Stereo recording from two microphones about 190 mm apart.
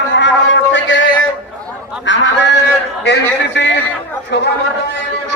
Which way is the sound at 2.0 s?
75° left (ahead or behind).